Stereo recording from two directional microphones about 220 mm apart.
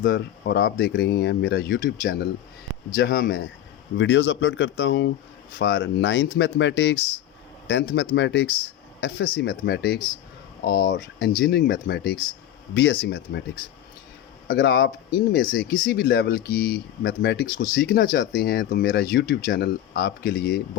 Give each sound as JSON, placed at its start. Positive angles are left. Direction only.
{"t": 0.0, "sound": "speech", "side_deg": 45}
{"t": 3.9, "sound": "speech", "side_deg": 55}
{"t": 14.4, "sound": "speech", "side_deg": 45}